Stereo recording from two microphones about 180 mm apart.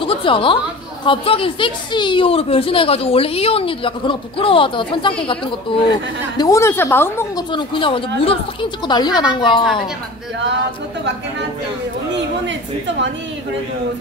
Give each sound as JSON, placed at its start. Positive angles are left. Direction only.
{"t": 0.0, "sound": "a woman's voice", "side_deg": 30}
{"t": 7.5, "sound": "a woman's voice", "side_deg": 30}